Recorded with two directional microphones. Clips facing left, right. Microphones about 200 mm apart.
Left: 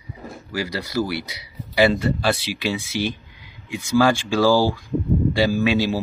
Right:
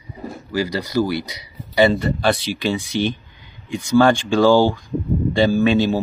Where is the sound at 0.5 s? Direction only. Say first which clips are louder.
Right 4 dB; 5° left (ahead or behind).